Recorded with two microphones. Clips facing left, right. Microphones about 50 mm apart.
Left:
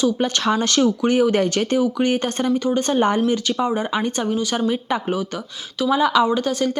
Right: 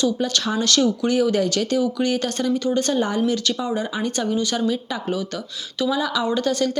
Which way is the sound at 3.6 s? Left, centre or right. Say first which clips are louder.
Left 3 dB; left.